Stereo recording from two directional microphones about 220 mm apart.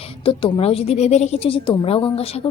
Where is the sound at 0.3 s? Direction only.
25° left (ahead or behind).